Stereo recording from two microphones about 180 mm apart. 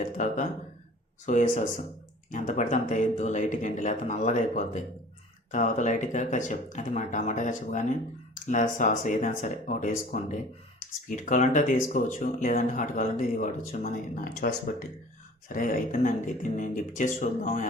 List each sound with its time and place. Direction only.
0.2 s speech: 45° left (ahead or behind)